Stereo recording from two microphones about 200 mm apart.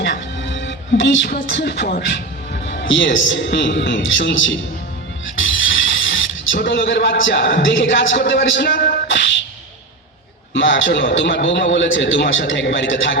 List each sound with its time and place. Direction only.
0.0 s music: 65° left (ahead or behind)
2.8 s a man's voice: 70° left (ahead or behind)
6.1 s a man's voice: 70° left (ahead or behind); by 9.0 s 50° left (ahead or behind)
9.0 s music: 65° left (ahead or behind)
10.5 s a man's voice: 70° left (ahead or behind)